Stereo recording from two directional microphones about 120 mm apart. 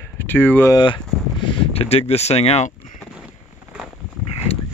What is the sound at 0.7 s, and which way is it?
Speech, 35° left (ahead or behind).